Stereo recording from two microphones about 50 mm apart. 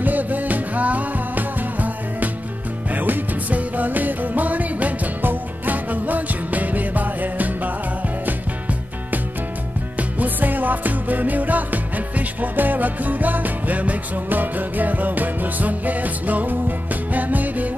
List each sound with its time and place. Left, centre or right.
0.0 s music: right